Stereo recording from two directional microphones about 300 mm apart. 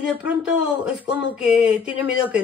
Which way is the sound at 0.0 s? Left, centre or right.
Centre.